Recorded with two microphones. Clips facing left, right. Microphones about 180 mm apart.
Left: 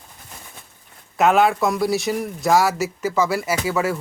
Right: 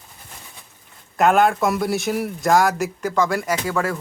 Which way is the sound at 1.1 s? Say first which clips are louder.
Even; centre (ahead or behind).